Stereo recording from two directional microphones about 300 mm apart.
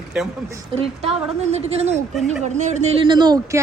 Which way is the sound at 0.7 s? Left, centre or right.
Centre.